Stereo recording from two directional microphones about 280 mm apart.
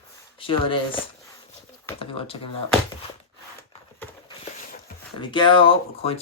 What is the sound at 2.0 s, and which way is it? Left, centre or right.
Speech, centre.